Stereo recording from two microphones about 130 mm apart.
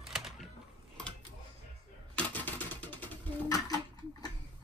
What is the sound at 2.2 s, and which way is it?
Typewriter, 10° left (ahead or behind).